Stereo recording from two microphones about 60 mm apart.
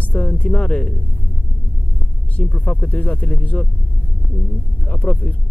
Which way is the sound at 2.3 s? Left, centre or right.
Left.